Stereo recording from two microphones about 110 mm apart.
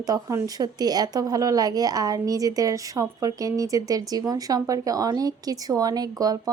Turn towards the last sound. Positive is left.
turn(degrees=-35)  # may be behind; listen again after turning